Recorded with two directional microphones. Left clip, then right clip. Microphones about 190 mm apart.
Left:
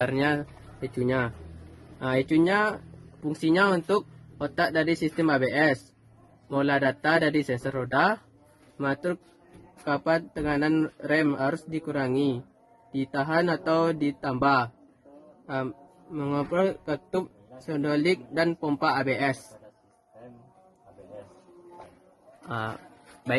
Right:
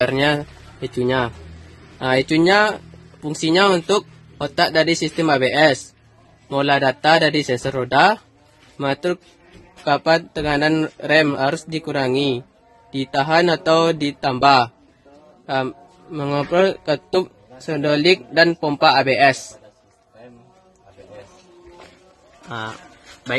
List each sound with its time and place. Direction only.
0.0 s a man's voice: 30° right (ahead or behind)
22.4 s a man's voice: 10° left (ahead or behind)